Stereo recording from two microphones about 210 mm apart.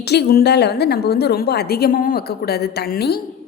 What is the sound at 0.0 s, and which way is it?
A woman's voice, 50° left (ahead or behind).